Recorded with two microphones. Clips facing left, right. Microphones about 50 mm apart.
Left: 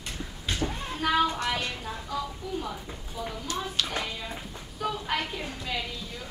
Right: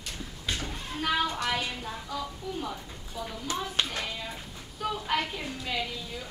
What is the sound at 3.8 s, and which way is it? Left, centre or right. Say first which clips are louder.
Clapping: right 1 dB; right.